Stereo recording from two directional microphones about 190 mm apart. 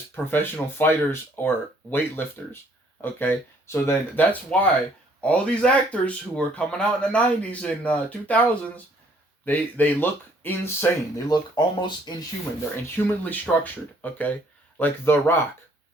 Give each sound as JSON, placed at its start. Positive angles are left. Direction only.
{"t": 0.3, "sound": "speech", "side_deg": 10}
{"t": 11.3, "sound": "speech", "side_deg": 25}
{"t": 12.7, "sound": "speech", "side_deg": 10}